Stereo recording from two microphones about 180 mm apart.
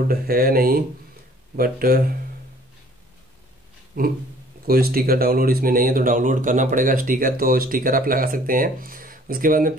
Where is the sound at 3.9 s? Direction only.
50° right (ahead or behind).